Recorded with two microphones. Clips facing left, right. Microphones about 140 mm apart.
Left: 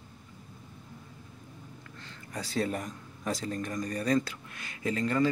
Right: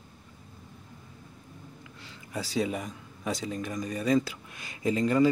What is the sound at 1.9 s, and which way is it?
Speech, 10° right (ahead or behind).